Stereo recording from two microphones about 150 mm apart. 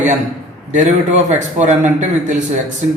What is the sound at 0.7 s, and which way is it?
A man's voice, 55° right (ahead or behind).